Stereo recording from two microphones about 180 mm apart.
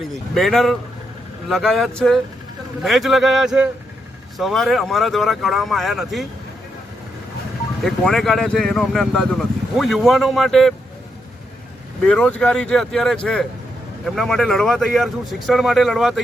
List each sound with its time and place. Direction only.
0.3 s speech: centre (ahead or behind)
7.9 s speech: centre (ahead or behind)
12.0 s speech: 5° left (ahead or behind)